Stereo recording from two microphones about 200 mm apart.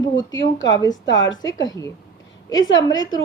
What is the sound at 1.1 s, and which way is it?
Speech, 65° left (ahead or behind).